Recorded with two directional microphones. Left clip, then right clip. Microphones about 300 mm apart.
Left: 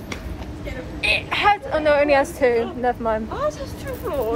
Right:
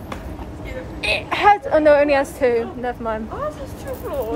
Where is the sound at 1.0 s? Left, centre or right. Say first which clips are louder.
Right 3 dB; centre.